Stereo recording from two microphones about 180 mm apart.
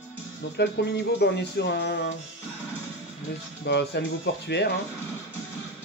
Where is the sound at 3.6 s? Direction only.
70° left (ahead or behind).